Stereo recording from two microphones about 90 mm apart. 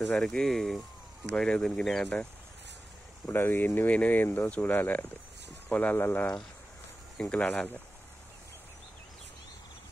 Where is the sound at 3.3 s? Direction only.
25° left (ahead or behind).